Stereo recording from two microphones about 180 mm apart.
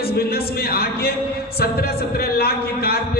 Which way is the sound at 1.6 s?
60° left (ahead or behind).